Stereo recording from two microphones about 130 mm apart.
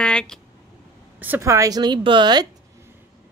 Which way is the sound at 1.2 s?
20° right (ahead or behind).